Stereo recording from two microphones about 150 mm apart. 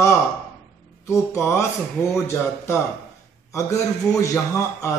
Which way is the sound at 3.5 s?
20° left (ahead or behind).